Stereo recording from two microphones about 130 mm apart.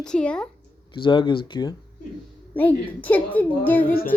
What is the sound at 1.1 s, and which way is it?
Speech, 35° left (ahead or behind).